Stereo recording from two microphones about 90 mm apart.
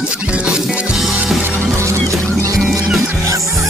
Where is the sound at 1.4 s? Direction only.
25° right (ahead or behind).